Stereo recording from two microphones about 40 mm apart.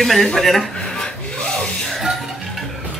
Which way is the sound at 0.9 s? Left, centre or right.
Centre.